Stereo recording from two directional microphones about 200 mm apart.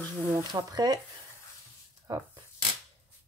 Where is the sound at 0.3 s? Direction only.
15° right (ahead or behind).